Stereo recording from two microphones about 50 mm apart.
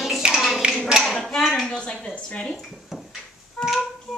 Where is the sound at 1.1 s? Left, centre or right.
Centre.